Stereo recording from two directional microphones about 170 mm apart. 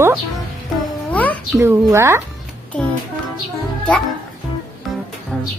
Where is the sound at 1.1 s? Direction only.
10° left (ahead or behind).